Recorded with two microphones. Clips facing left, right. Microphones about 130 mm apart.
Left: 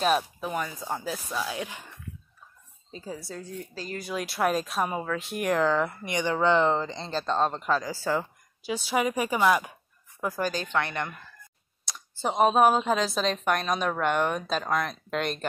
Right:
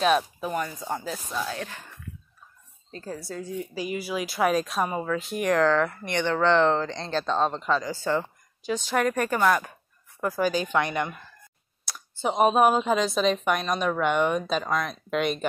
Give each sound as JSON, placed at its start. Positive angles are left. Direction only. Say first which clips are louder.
{"t": 0.0, "sound": "speech", "louder": "right 2 dB", "side_deg": 0}
{"t": 2.9, "sound": "speech", "louder": "right 2 dB", "side_deg": 5}
{"t": 10.5, "sound": "speech", "louder": "right 4 dB", "side_deg": -10}
{"t": 11.8, "sound": "speech", "louder": "right 2 dB", "side_deg": 0}